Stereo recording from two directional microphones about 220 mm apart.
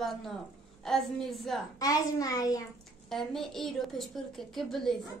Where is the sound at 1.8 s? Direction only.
15° left (ahead or behind).